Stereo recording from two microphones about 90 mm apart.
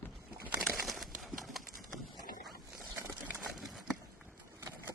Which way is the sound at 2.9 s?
30° right (ahead or behind).